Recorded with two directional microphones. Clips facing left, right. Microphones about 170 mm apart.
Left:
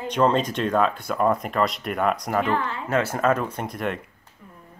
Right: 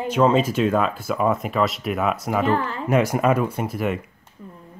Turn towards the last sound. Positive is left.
turn(degrees=-5)  # may be behind; listen again after turning